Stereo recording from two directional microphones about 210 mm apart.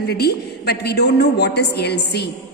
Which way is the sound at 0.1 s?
50° left (ahead or behind).